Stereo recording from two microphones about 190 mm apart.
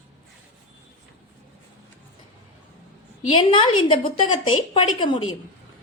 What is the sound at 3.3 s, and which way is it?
A woman's voice, 25° left (ahead or behind).